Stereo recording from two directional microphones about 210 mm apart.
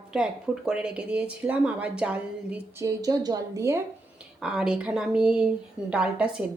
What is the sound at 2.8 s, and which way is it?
A woman's voice, 15° right (ahead or behind).